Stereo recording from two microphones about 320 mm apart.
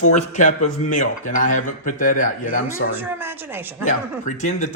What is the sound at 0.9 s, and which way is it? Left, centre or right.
A man's voice, left.